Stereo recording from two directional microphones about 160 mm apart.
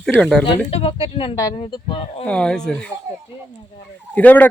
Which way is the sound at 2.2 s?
5° left (ahead or behind).